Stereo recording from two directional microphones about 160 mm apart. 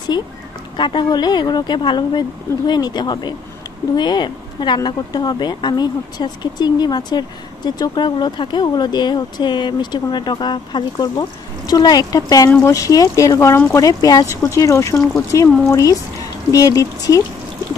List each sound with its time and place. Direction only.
0.1 s speech: 25° left (ahead or behind)